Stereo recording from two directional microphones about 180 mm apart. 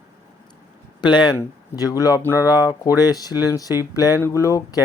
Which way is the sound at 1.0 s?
25° left (ahead or behind).